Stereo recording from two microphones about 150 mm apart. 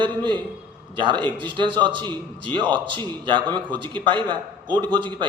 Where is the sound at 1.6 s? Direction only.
30° right (ahead or behind).